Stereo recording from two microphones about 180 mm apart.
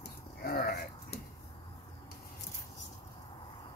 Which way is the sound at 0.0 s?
55° left (ahead or behind).